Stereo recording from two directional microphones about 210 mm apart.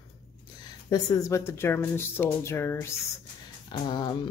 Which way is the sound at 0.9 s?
15° left (ahead or behind).